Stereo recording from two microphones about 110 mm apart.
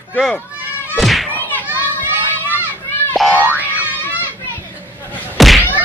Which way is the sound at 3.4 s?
15° right (ahead or behind).